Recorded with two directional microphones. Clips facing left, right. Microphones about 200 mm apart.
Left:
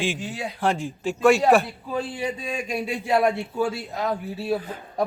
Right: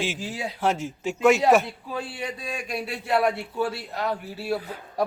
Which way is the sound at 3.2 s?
5° right (ahead or behind).